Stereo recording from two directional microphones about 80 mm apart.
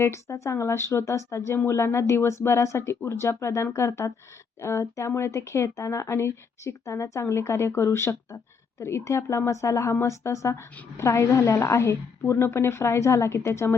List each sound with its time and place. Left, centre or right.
0.0 s speech: left